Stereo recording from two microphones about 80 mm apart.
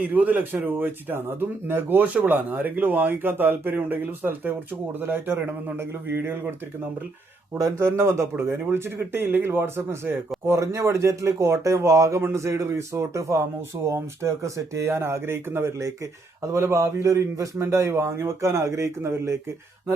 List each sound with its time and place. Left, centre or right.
0.0 s speech: right
7.6 s speech: right